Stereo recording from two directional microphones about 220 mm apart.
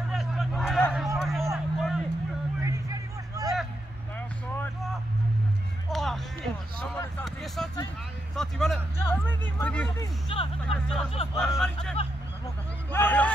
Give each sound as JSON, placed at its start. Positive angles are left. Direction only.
{"t": 0.1, "sound": "a sound", "side_deg": 0}
{"t": 1.5, "sound": "vehicle", "side_deg": 0}
{"t": 2.6, "sound": "a sound", "side_deg": -15}
{"t": 5.9, "sound": "music", "side_deg": 0}
{"t": 7.0, "sound": "speech", "side_deg": 5}
{"t": 9.8, "sound": "speech", "side_deg": 25}
{"t": 10.6, "sound": "speech", "side_deg": 0}